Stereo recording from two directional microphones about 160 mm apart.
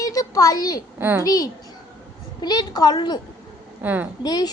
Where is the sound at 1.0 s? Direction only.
15° right (ahead or behind).